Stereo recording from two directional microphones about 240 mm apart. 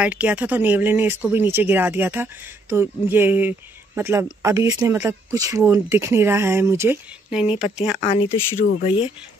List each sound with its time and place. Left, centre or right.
0.0 s speech: centre
8.0 s speech: left